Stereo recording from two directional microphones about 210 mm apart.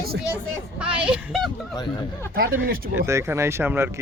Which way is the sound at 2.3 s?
45° right (ahead or behind).